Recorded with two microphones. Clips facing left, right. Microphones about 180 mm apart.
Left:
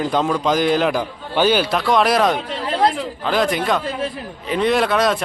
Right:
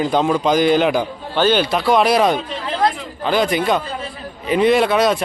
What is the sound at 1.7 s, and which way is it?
Speech, centre (ahead or behind).